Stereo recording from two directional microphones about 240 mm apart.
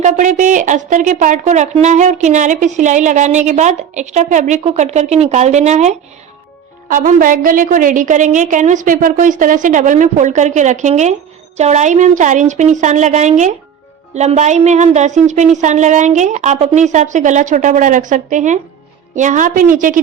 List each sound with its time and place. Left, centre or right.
0.0 s a woman's voice: right